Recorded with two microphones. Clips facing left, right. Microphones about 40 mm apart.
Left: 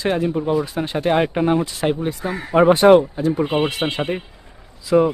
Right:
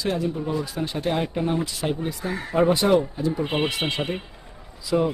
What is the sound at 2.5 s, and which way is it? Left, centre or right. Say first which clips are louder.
Speech: left 8 dB; left.